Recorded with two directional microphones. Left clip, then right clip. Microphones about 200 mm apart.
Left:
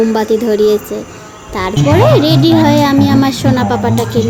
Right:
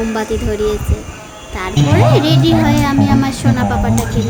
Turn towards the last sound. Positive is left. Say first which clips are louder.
# left 5 dB
turn(degrees=30)  # may be behind; listen again after turning